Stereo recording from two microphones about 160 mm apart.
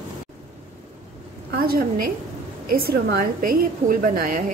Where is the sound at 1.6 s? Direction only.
70° right (ahead or behind).